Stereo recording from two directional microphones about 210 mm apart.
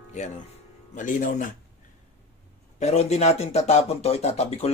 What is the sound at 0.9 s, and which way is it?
Speech, 35° left (ahead or behind).